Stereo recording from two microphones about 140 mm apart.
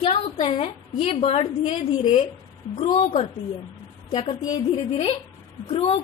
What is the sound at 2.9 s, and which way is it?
Speech, 40° left (ahead or behind).